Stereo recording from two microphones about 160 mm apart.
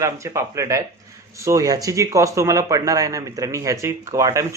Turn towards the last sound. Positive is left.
turn(degrees=-20)  # may be behind; listen again after turning